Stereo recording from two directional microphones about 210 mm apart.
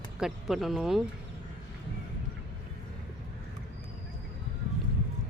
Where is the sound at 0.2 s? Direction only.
Centre (ahead or behind).